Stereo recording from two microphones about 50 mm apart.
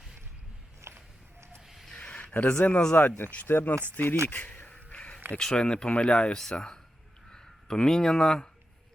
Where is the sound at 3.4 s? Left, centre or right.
Left.